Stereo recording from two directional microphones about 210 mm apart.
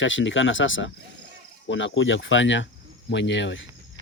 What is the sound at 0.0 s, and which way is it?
Speech, 65° left (ahead or behind).